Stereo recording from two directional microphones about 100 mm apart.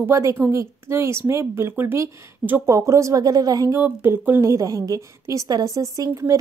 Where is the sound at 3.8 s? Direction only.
20° right (ahead or behind).